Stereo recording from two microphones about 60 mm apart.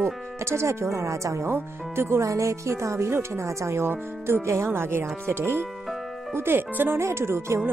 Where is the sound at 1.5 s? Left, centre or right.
Right.